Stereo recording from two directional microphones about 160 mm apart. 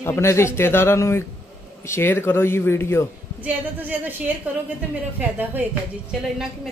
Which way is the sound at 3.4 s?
10° right (ahead or behind).